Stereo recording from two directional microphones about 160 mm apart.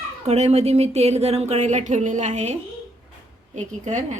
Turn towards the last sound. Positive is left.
turn(degrees=-50)  # may be behind; listen again after turning